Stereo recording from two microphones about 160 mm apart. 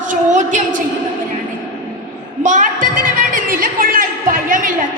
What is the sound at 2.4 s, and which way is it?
Speech, 55° right (ahead or behind).